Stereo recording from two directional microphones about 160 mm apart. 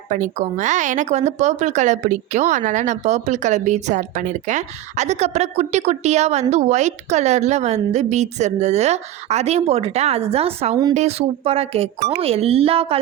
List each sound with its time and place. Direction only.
0.1 s a woman's voice: 50° right (ahead or behind)